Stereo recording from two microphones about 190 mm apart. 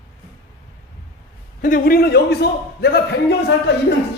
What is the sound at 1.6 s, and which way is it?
A man's voice, 50° left (ahead or behind).